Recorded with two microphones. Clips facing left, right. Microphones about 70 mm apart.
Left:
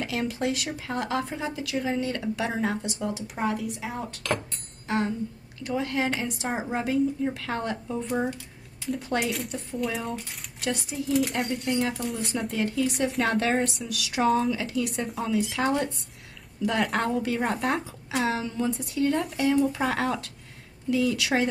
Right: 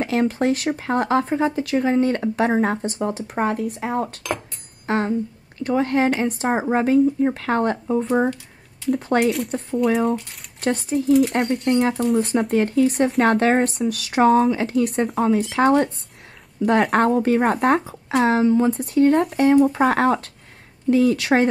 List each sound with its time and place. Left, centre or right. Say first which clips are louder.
0.0 s speech: right 8 dB; right
10.6 s speech: right 9 dB; right
11.3 s speech: right 8 dB; right